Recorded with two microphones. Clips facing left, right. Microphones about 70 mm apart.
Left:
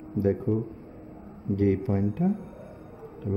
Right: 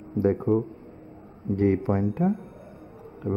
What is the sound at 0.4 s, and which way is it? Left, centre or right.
Speech, right.